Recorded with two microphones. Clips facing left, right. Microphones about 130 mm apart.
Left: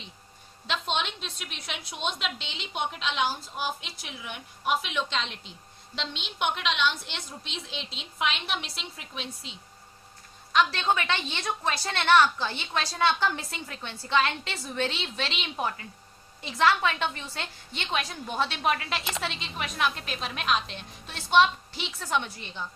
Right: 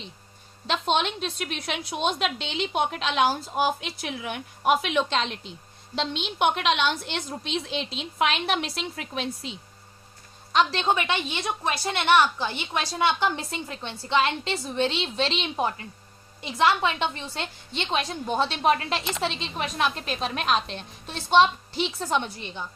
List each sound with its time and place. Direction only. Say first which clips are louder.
0.7 s a woman's voice: right 6 dB; 45° right (ahead or behind)
1.9 s a woman's voice: right 6 dB; 40° right (ahead or behind)
2.2 s a woman's voice: right 8 dB; 55° right (ahead or behind)
6.0 s a woman's voice: right 7 dB; 45° right (ahead or behind)
10.5 s a woman's voice: right 2 dB; 30° right (ahead or behind)